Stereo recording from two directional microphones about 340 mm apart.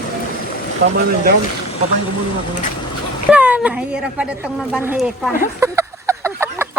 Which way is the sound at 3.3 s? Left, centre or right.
Centre.